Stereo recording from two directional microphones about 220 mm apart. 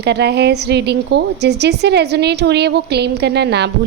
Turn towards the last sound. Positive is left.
turn(degrees=-50)  # may be behind; listen again after turning